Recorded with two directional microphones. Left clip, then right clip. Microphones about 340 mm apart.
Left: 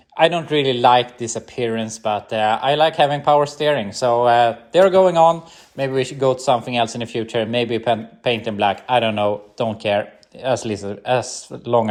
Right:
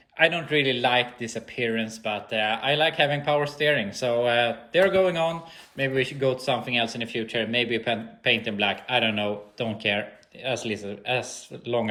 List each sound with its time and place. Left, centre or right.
0.2 s speech: centre
4.0 s speech: left
4.9 s speech: centre
5.7 s speech: left
6.0 s speech: centre